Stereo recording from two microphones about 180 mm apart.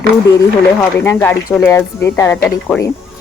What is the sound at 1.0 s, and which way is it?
Speech, 10° left (ahead or behind).